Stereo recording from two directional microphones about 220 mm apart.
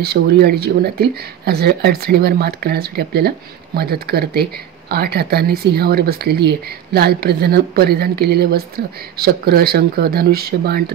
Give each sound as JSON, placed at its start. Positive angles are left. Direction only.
{"t": 0.0, "sound": "speech", "side_deg": -45}